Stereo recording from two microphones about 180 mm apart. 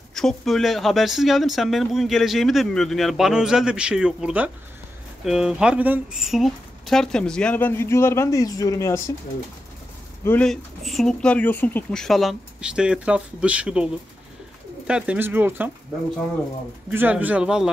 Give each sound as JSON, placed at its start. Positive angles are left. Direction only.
{"t": 0.1, "sound": "speech", "side_deg": 0}
{"t": 10.2, "sound": "speech", "side_deg": 5}
{"t": 14.9, "sound": "speech", "side_deg": -5}
{"t": 16.9, "sound": "speech", "side_deg": -10}